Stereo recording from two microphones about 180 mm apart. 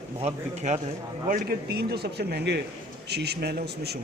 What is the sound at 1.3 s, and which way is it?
Speech, 60° right (ahead or behind).